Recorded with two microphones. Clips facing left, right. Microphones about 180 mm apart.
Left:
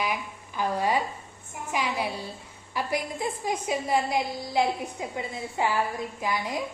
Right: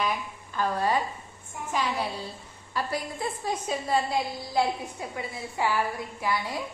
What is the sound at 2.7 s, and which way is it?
A woman's voice, 15° left (ahead or behind).